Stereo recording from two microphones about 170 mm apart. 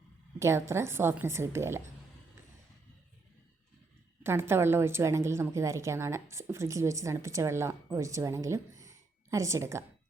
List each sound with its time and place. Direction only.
0.3 s a woman's voice: 15° right (ahead or behind)
4.2 s a woman's voice: 15° right (ahead or behind)